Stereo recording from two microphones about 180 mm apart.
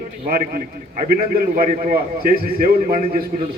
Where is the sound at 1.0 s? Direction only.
50° right (ahead or behind).